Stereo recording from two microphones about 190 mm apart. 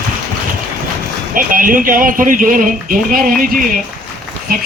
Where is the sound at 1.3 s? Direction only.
45° right (ahead or behind).